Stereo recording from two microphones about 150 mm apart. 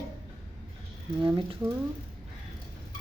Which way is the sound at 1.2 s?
35° right (ahead or behind).